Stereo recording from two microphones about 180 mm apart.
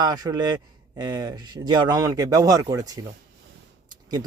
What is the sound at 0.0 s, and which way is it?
Speech, 20° right (ahead or behind).